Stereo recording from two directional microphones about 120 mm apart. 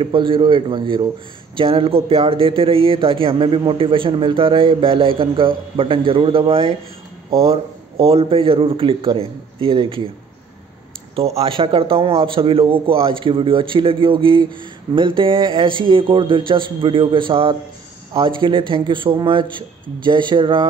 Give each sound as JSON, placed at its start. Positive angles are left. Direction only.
{"t": 0.0, "sound": "speech", "side_deg": -45}
{"t": 11.1, "sound": "speech", "side_deg": -55}